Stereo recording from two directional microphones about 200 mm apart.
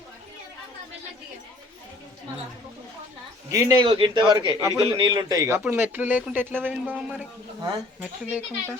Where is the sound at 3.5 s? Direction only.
20° right (ahead or behind).